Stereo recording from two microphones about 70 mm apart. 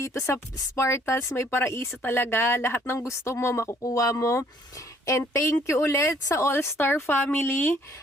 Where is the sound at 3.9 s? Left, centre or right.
Left.